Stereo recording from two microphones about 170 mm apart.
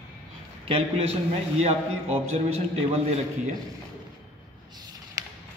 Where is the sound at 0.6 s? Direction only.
35° right (ahead or behind).